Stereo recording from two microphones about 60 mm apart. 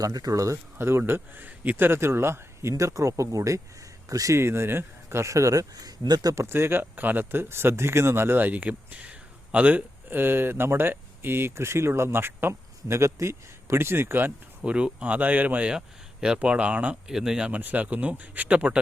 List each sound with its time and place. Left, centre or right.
0.0 s speech: right
0.8 s speech: right
4.4 s speech: right
6.2 s speech: right
14.6 s speech: centre
17.1 s speech: centre
17.5 s speech: right